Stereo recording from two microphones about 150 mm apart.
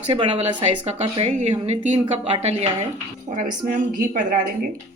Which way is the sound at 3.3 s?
60° right (ahead or behind).